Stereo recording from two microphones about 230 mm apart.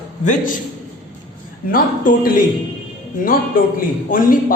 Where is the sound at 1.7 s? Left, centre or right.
Left.